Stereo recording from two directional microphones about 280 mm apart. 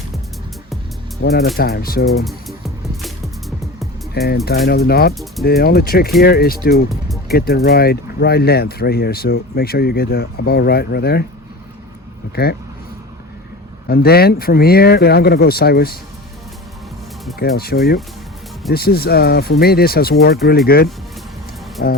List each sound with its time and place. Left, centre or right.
1.2 s speech: left
2.0 s music: centre
4.4 s speech: left
13.8 s speech: left
17.6 s speech: left